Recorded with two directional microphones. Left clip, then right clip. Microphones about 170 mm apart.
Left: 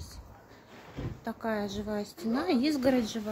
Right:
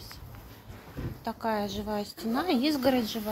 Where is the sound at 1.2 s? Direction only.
5° left (ahead or behind).